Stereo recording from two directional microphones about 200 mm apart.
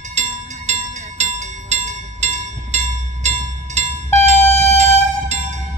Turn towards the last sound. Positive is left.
turn(degrees=-35)  # may be behind; listen again after turning